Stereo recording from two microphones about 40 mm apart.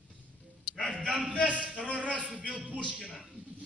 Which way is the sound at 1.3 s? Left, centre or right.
Left.